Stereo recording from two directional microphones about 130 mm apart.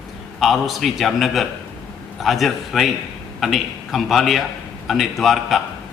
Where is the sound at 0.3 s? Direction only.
Centre (ahead or behind).